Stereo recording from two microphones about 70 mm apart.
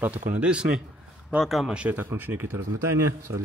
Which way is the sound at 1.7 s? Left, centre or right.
Centre.